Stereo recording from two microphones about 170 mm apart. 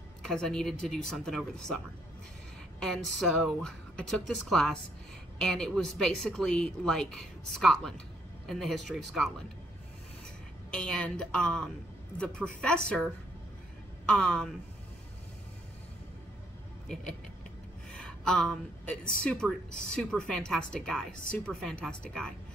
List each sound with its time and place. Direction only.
0.2 s speech: 5° left (ahead or behind)
2.8 s speech: 5° left (ahead or behind)
10.7 s speech: 5° left (ahead or behind)
14.0 s speech: 5° left (ahead or behind)
17.9 s a sound: 5° left (ahead or behind)
19.2 s speech: 5° left (ahead or behind)